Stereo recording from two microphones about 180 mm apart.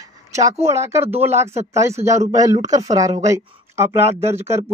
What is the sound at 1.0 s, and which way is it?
Speech, 35° right (ahead or behind).